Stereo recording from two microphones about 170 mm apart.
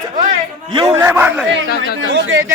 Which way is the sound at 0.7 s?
30° right (ahead or behind).